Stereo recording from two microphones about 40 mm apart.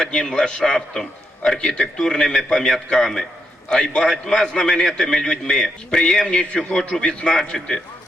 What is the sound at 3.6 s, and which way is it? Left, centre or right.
A man's voice, centre.